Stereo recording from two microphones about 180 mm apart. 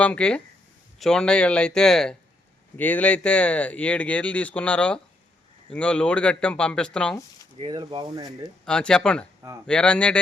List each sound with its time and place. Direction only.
0.0 s speech: 5° left (ahead or behind)
7.6 s speech: 25° right (ahead or behind)
8.6 s speech: 5° left (ahead or behind)